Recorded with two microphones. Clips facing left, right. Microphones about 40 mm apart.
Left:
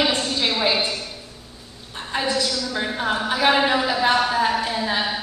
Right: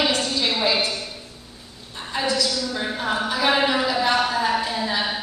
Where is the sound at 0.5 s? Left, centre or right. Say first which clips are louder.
Left 1 dB; centre.